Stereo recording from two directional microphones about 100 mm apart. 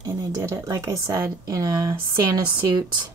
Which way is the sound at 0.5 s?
40° right (ahead or behind).